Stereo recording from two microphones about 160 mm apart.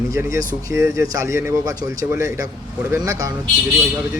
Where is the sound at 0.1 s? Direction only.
20° right (ahead or behind).